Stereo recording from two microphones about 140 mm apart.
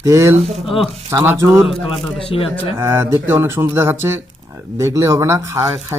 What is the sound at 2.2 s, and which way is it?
Speech, 40° left (ahead or behind).